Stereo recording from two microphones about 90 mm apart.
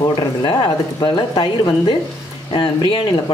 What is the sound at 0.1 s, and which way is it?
Speech, 55° left (ahead or behind).